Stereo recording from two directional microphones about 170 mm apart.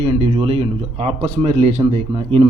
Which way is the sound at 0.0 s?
35° right (ahead or behind).